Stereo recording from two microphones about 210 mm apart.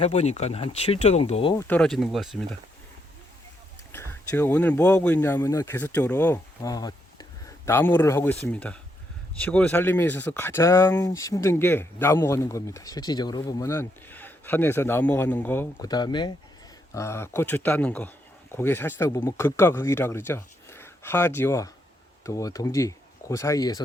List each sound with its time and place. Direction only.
0.0 s speech: 30° left (ahead or behind)
1.5 s speech: 10° left (ahead or behind)
3.9 s speech: 10° left (ahead or behind)